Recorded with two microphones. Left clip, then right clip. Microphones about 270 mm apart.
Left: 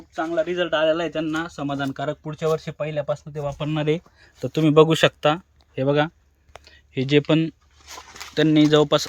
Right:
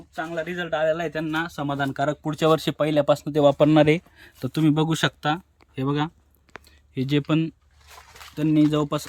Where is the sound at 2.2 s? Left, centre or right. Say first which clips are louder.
Right 4 dB; right.